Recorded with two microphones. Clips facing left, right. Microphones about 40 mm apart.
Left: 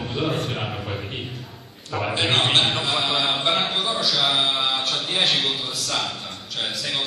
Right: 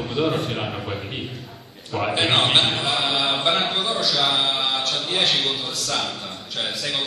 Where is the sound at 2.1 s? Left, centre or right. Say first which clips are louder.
Right 1 dB; centre.